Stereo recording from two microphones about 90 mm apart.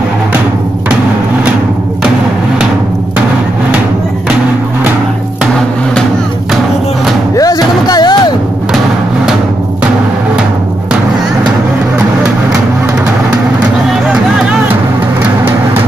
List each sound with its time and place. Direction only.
7.3 s music: 45° left (ahead or behind)
14.4 s music: 10° right (ahead or behind)